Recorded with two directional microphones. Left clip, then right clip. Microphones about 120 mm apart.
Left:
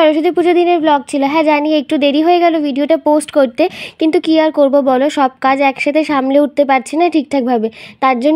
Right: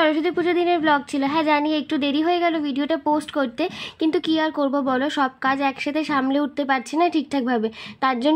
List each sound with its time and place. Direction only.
0.0 s speech: 45° left (ahead or behind)